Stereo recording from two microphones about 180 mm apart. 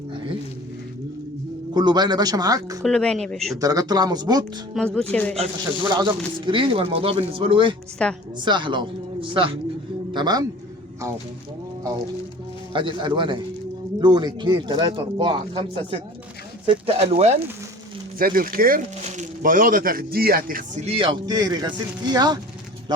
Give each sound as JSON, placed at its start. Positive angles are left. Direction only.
{"t": 0.1, "sound": "a sound", "side_deg": -25}
{"t": 1.7, "sound": "speech", "side_deg": -25}
{"t": 2.8, "sound": "speech", "side_deg": 5}
{"t": 3.6, "sound": "speech", "side_deg": -20}
{"t": 4.9, "sound": "speech", "side_deg": 10}
{"t": 5.9, "sound": "speech", "side_deg": -25}
{"t": 8.0, "sound": "speech", "side_deg": 5}
{"t": 8.4, "sound": "a man's voice", "side_deg": -25}
{"t": 12.7, "sound": "speech", "side_deg": -25}
{"t": 18.2, "sound": "speech", "side_deg": -50}
{"t": 20.8, "sound": "speech", "side_deg": -30}